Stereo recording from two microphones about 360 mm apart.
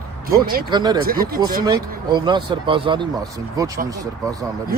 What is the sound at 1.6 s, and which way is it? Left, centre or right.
Speech, centre.